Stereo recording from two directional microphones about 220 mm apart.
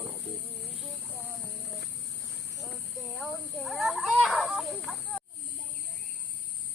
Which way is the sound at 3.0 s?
Centre (ahead or behind).